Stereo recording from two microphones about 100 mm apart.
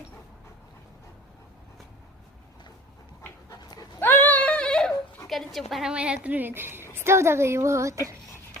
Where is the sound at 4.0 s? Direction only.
20° left (ahead or behind); by 5.6 s centre (ahead or behind).